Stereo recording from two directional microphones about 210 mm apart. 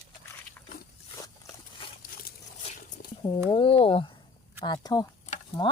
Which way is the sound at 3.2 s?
25° left (ahead or behind).